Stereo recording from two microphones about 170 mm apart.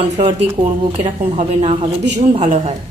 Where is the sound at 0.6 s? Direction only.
40° right (ahead or behind).